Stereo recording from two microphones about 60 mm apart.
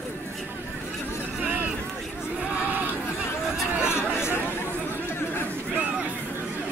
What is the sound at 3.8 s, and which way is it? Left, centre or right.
Chatter, left.